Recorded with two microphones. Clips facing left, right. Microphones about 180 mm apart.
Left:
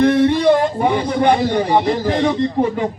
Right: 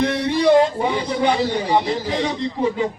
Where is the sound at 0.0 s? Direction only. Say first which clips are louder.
Left 5 dB; 50° left (ahead or behind).